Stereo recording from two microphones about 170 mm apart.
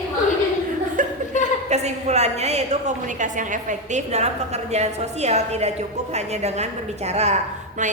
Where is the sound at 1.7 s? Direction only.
40° right (ahead or behind).